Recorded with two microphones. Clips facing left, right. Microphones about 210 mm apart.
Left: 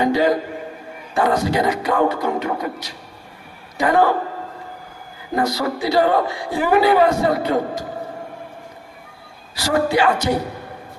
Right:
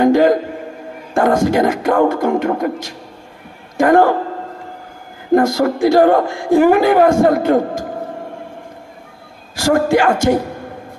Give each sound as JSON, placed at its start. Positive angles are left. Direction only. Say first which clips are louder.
{"t": 0.0, "sound": "a woman's voice", "louder": "right 6 dB", "side_deg": -50}
{"t": 5.3, "sound": "a woman's voice", "louder": "right 8 dB", "side_deg": -50}
{"t": 9.6, "sound": "a woman's voice", "louder": "right 5 dB", "side_deg": -50}